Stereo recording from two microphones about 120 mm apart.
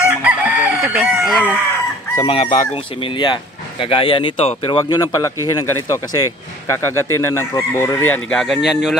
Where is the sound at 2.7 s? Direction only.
50° left (ahead or behind).